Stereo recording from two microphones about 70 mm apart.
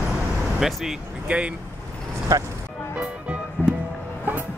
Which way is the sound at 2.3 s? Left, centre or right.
Right.